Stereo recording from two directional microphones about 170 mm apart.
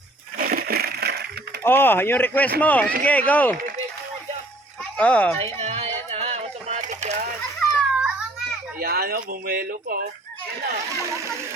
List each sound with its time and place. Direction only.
0.3 s a sound: 60° right (ahead or behind)
1.6 s speech: 10° left (ahead or behind)
4.8 s speech: 5° left (ahead or behind)
5.5 s a sound: 40° right (ahead or behind)
7.6 s children playing: centre (ahead or behind)
8.8 s speech: 65° right (ahead or behind)